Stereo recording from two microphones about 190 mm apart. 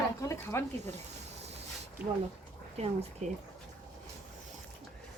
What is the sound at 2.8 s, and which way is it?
Speech, 35° right (ahead or behind).